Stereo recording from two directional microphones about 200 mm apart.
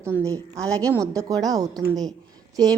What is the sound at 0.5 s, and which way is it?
Speech, 5° left (ahead or behind).